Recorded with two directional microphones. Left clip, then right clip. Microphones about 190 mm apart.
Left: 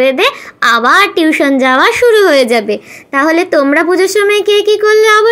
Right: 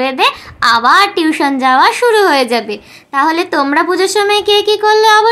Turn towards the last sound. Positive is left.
turn(degrees=20)  # may be behind; listen again after turning